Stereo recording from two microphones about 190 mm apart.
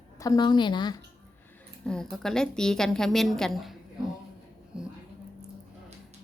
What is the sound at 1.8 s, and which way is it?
A woman's voice, 5° left (ahead or behind).